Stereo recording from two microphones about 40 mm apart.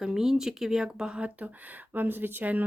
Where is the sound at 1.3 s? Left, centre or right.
Right.